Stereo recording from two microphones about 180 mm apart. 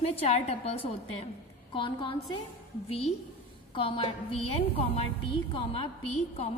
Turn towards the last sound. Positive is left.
turn(degrees=35)  # may be behind; listen again after turning